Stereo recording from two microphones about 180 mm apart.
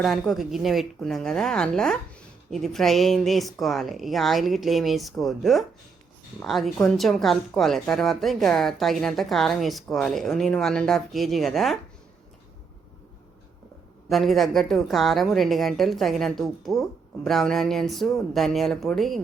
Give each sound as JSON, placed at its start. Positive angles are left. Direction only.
{"t": 0.0, "sound": "a woman's voice", "side_deg": 0}
{"t": 14.1, "sound": "a woman's voice", "side_deg": 0}